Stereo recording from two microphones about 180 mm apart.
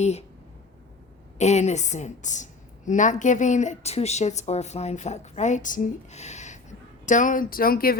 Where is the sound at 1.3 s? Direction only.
40° left (ahead or behind).